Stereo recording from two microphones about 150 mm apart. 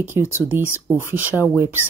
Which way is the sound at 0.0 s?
15° right (ahead or behind).